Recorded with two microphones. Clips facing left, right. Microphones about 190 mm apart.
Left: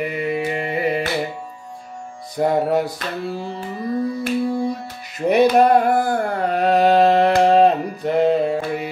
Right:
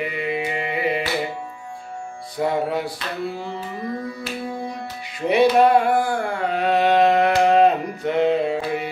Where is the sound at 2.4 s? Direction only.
45° left (ahead or behind).